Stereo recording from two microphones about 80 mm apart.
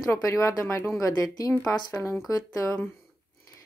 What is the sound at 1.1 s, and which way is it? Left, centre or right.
Speech, left.